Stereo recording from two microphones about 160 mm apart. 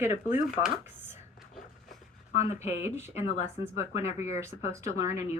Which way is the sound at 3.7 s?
15° right (ahead or behind).